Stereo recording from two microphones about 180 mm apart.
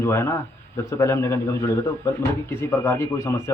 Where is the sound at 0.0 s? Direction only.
15° left (ahead or behind).